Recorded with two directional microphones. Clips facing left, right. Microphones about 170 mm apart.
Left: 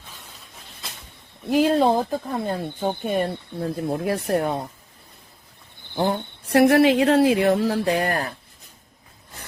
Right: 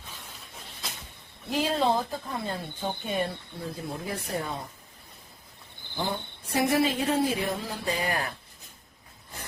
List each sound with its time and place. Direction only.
1.5 s speech: 50° left (ahead or behind)
6.0 s speech: 65° left (ahead or behind)